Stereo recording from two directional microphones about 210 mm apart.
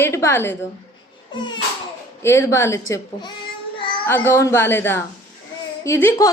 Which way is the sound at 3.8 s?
25° left (ahead or behind).